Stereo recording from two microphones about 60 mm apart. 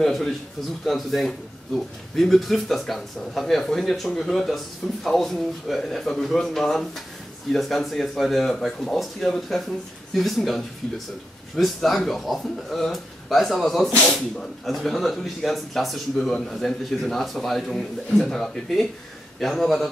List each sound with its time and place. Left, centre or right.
0.0 s speech: centre